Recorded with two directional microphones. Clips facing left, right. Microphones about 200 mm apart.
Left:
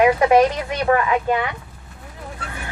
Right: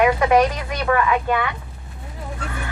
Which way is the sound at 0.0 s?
30° left (ahead or behind).